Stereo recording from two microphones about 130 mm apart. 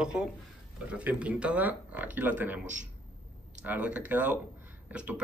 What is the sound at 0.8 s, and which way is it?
A man's voice, 10° right (ahead or behind).